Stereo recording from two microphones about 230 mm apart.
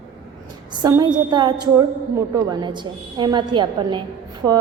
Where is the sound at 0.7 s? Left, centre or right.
Centre.